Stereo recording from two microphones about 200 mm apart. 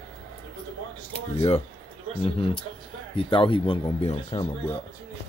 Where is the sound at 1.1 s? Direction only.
30° left (ahead or behind).